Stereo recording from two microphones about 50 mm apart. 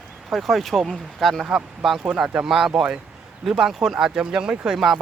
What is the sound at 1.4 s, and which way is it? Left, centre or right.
Speech, centre.